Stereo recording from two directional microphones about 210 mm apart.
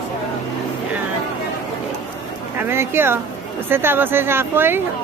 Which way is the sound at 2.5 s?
10° right (ahead or behind).